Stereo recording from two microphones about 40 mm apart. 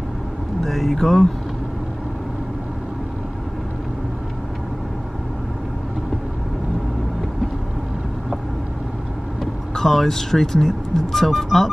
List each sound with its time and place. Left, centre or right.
0.7 s speech: centre
9.4 s speech: centre